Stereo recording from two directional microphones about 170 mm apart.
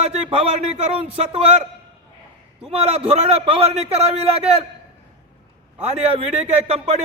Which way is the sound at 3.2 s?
40° right (ahead or behind).